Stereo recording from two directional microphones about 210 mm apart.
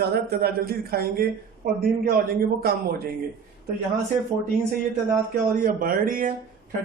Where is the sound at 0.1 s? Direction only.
45° right (ahead or behind).